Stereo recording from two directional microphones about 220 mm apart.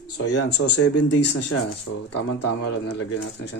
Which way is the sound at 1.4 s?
90° left.